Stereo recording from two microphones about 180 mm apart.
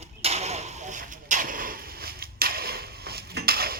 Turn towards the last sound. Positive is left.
turn(degrees=-60)  # may be behind; listen again after turning